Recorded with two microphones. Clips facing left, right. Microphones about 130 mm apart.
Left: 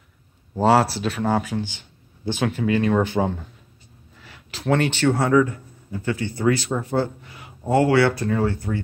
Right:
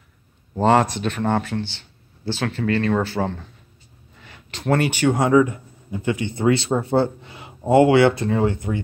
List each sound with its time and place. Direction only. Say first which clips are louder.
0.6 s speech: even; 5° left (ahead or behind)
4.2 s speech: right 1 dB; 5° left (ahead or behind); by 8.8 s 20° right (ahead or behind)